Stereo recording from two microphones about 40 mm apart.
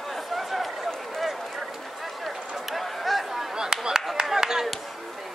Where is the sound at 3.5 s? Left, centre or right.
Centre.